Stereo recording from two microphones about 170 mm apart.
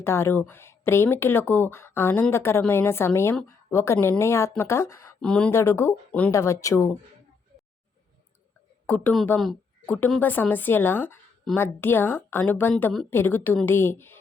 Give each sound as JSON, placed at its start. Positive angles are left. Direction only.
{"t": 0.0, "sound": "a woman's voice", "side_deg": 15}
{"t": 5.2, "sound": "a woman's voice", "side_deg": 5}
{"t": 8.9, "sound": "a woman's voice", "side_deg": 10}